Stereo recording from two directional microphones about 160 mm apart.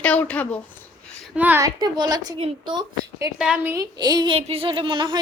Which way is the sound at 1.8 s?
25° right (ahead or behind).